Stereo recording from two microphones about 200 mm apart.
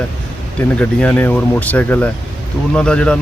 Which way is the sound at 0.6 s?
5° left (ahead or behind).